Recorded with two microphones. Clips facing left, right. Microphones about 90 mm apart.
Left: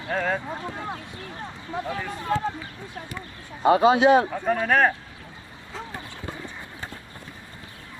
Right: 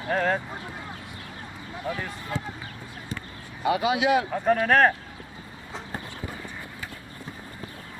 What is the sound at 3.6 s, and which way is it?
Speech, 35° left (ahead or behind).